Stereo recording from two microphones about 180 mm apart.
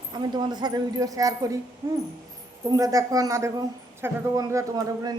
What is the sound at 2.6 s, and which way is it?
A woman's voice, 20° right (ahead or behind).